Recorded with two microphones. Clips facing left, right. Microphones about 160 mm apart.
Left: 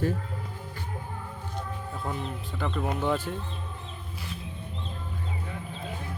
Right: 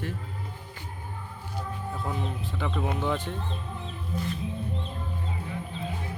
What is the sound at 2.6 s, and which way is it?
Speech, centre (ahead or behind).